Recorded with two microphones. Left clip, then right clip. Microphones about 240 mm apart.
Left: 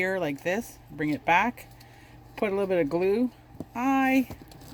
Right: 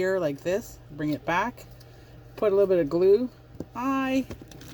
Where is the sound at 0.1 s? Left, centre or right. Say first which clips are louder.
Right 2 dB; left.